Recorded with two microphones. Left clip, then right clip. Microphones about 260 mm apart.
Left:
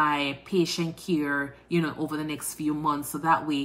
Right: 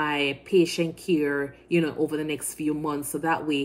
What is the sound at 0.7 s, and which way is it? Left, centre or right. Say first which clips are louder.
Speech: right 3 dB; left.